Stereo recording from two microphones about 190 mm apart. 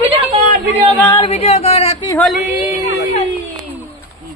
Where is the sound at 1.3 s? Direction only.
35° left (ahead or behind).